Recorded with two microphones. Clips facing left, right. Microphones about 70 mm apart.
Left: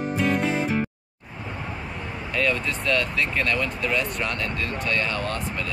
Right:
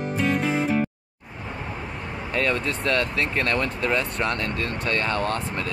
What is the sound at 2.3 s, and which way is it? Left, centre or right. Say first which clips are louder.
Speech: even; right.